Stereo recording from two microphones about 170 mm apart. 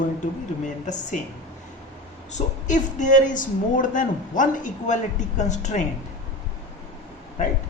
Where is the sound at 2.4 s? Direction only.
45° left (ahead or behind).